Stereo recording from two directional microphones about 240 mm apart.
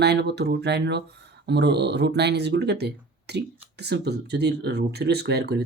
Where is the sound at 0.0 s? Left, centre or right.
Right.